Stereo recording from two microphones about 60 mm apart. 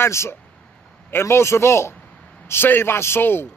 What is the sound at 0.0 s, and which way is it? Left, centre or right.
A man's voice, left.